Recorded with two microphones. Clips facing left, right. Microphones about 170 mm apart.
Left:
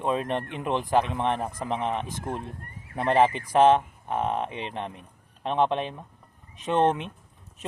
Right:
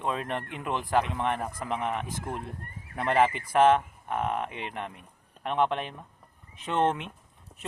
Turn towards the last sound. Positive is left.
turn(degrees=20)  # may be behind; listen again after turning